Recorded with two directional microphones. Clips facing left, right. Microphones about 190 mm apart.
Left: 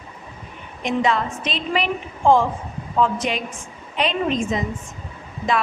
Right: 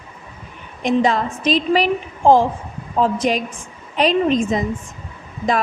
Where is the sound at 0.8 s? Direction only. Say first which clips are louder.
Right 4 dB; 35° right (ahead or behind).